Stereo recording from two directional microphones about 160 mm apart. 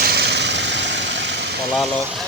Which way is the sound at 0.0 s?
85° right.